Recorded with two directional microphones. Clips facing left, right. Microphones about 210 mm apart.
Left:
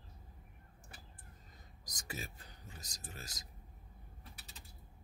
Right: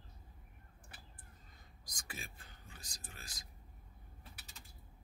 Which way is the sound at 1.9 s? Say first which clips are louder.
Left 5 dB; 40° left (ahead or behind).